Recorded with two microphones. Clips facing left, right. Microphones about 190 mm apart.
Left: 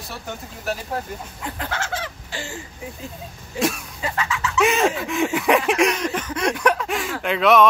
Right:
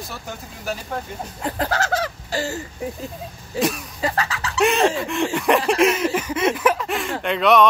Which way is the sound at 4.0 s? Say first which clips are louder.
Right 2 dB; 35° right (ahead or behind).